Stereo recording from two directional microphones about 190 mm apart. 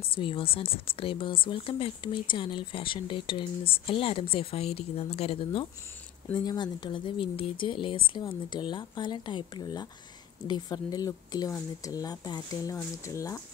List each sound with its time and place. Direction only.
0.1 s speech: 30° left (ahead or behind)